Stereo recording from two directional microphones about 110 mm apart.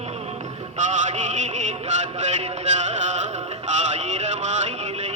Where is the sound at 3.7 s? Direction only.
90° right.